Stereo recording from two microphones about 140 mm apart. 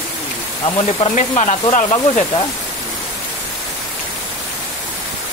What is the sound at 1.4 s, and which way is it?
Speech, 60° left (ahead or behind).